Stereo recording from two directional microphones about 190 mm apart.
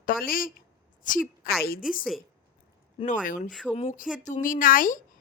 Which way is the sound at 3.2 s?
45° left (ahead or behind).